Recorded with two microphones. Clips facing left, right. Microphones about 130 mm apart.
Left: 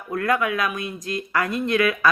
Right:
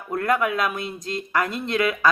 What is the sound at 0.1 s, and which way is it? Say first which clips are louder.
Speech: even; 30° right (ahead or behind).